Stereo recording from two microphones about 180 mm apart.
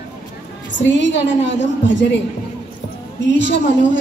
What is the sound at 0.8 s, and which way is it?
A woman's voice, 85° left.